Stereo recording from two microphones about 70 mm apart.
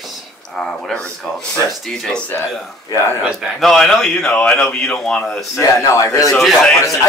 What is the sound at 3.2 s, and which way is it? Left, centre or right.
Speech, centre.